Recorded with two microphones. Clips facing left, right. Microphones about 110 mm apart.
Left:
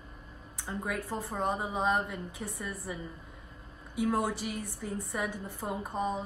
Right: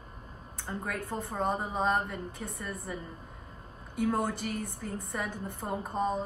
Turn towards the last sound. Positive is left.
turn(degrees=0)  # may be behind; listen again after turning